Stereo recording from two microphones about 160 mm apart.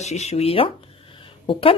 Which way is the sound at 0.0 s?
45° left (ahead or behind).